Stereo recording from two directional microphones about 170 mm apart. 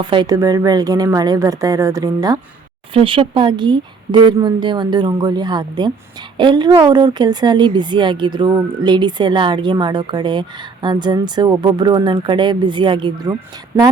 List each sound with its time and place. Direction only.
0.0 s speech: 25° right (ahead or behind)
13.7 s a woman's voice: 15° right (ahead or behind)